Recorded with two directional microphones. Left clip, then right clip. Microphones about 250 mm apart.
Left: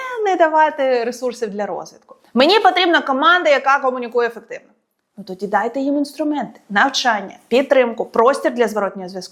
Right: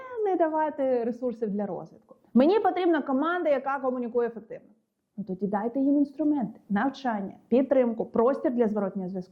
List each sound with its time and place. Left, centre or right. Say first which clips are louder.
0.0 s speech: left 10 dB; centre